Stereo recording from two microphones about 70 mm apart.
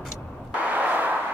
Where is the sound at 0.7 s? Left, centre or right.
Right.